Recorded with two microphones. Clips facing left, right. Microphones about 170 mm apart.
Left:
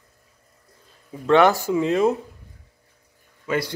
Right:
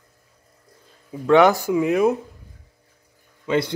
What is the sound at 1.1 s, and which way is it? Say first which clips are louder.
Speech: right 2 dB; 15° right (ahead or behind).